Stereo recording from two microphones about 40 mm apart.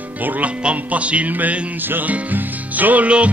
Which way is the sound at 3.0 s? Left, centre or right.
Right.